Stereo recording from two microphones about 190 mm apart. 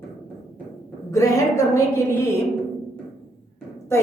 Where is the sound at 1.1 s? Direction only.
15° left (ahead or behind).